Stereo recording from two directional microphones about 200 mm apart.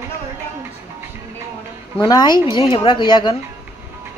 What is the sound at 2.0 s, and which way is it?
A man's voice, 20° left (ahead or behind).